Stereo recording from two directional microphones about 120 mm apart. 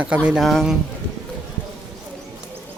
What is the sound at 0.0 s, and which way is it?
Speech, 10° right (ahead or behind).